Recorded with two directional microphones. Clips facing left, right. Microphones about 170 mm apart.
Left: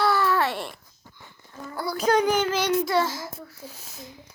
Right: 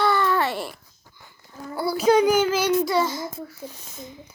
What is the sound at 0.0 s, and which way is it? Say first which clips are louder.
Babbling: right 1 dB; 5° left (ahead or behind).